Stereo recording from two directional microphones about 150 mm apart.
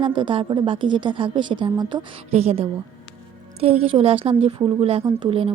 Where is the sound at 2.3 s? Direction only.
45° right (ahead or behind).